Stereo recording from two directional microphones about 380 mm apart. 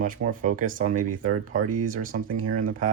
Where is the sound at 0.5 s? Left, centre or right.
Right.